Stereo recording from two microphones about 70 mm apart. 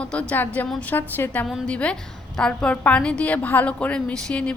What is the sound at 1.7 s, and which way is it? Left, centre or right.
A woman's voice, centre.